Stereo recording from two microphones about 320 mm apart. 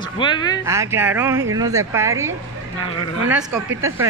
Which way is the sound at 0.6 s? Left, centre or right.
Centre.